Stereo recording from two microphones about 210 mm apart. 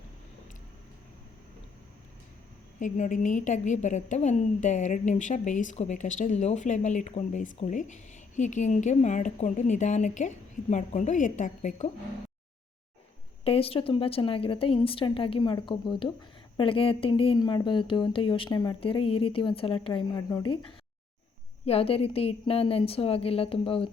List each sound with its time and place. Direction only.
2.7 s a woman's voice: 35° left (ahead or behind)
13.4 s speech: 25° left (ahead or behind)